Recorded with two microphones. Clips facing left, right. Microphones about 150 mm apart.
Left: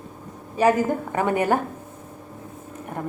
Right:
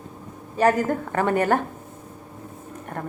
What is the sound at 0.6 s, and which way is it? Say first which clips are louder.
A woman's voice: left 1 dB; 15° left (ahead or behind).